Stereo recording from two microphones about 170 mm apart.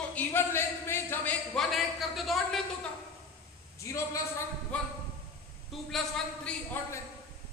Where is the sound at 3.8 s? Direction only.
20° left (ahead or behind).